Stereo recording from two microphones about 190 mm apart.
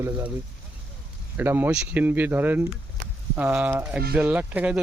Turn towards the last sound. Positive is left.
turn(degrees=-10)  # may be behind; listen again after turning